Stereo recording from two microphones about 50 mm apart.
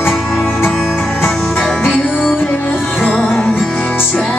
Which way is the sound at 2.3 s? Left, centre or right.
Left.